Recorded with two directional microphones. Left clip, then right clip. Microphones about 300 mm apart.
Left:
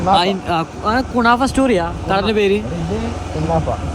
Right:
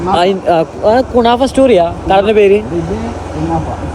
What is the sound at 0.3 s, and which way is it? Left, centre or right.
Speech, centre.